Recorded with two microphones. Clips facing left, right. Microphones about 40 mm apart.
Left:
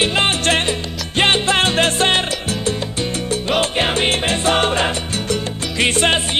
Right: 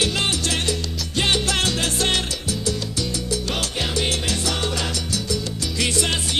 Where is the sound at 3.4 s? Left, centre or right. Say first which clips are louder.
Left 8 dB; left.